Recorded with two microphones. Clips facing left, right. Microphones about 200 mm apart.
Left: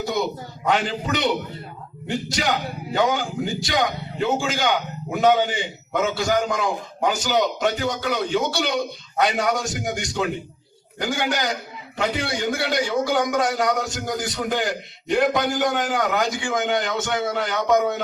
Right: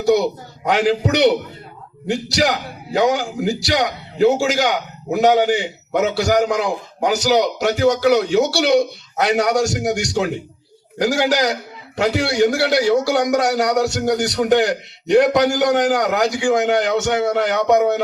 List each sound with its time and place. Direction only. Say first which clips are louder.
0.7 s a man's voice: right 6 dB; 75° right (ahead or behind)